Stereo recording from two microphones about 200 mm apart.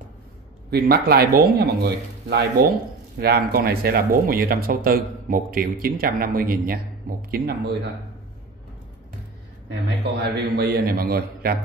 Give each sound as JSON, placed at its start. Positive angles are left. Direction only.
{"t": 0.7, "sound": "speech", "side_deg": -50}
{"t": 9.7, "sound": "speech", "side_deg": -60}